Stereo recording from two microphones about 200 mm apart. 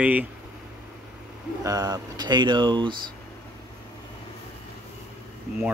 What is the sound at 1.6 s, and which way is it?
Speech, 15° right (ahead or behind).